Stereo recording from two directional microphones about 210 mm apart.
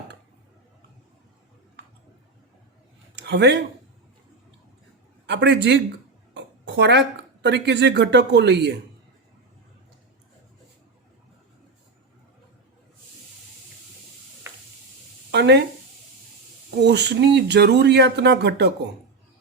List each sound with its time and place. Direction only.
3.2 s speech: 55° right (ahead or behind)
5.2 s a man's voice: 55° right (ahead or behind)
15.3 s a sound: 55° right (ahead or behind)
16.8 s speech: 55° right (ahead or behind)